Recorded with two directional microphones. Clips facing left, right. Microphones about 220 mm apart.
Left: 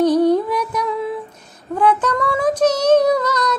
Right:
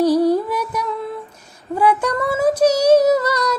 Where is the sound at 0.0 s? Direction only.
10° right (ahead or behind).